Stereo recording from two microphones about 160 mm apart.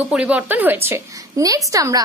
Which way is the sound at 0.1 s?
5° right (ahead or behind).